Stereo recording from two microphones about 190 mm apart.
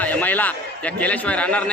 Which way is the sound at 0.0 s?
10° left (ahead or behind).